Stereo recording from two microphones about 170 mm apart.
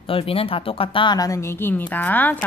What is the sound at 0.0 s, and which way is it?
Speech, 35° left (ahead or behind).